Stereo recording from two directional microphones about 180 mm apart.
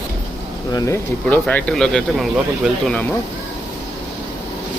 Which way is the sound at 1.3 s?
10° left (ahead or behind).